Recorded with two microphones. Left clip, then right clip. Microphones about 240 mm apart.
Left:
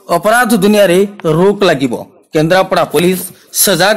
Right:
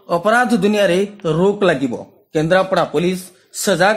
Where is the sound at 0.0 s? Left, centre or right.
Left.